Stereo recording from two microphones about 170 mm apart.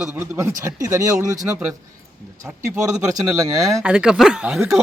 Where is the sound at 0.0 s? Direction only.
15° right (ahead or behind).